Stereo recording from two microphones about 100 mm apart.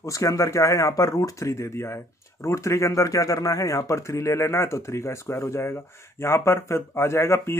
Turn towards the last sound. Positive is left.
turn(degrees=30)  # may be behind; listen again after turning